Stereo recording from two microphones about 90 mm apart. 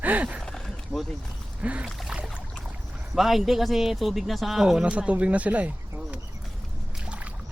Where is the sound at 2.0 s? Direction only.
10° right (ahead or behind).